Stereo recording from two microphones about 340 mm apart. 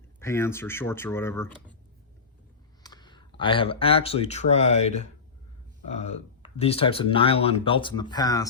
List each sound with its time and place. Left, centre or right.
0.2 s speech: centre
2.8 s speech: centre